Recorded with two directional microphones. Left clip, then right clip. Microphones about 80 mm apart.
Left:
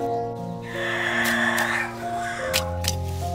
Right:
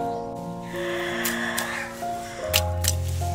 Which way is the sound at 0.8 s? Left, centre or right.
Left.